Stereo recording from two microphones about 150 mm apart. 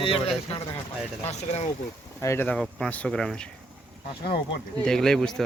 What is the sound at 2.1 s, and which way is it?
Speech, 15° left (ahead or behind).